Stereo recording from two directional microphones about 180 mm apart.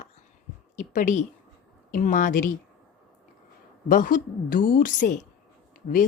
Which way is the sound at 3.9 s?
50° left (ahead or behind).